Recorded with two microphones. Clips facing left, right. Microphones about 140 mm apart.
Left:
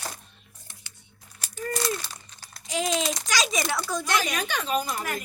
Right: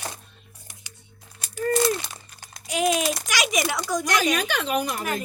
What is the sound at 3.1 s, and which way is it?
Speech, 15° right (ahead or behind).